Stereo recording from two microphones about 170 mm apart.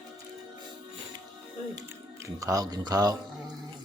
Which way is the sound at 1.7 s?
20° right (ahead or behind).